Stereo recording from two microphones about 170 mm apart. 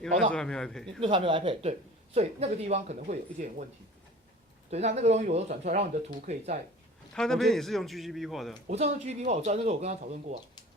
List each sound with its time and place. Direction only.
0.3 s a man's voice: 5° left (ahead or behind)
1.0 s speech: 30° right (ahead or behind); by 3.7 s 45° right (ahead or behind)
4.7 s speech: 40° right (ahead or behind)
7.1 s a man's voice: 5° left (ahead or behind)
8.6 s speech: 40° right (ahead or behind)